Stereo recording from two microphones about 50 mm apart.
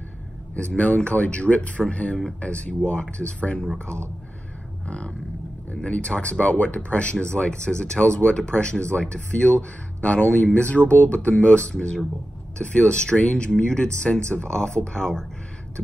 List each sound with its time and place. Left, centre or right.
0.6 s speech: left
4.8 s vehicle: left
5.8 s speech: left